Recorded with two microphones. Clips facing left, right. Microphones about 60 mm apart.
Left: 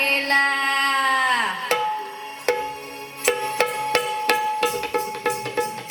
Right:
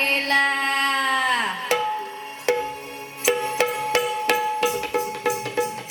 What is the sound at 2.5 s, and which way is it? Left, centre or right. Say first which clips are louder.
Music: even; left.